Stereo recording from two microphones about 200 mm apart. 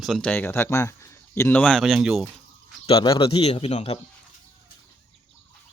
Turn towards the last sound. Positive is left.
turn(degrees=30)  # may be behind; listen again after turning